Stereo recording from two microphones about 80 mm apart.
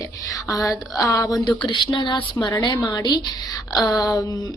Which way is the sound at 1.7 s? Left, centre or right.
Left.